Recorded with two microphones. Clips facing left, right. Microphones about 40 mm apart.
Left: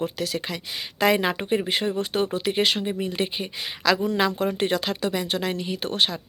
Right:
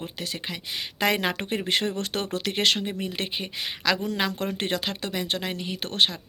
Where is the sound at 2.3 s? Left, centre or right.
Right.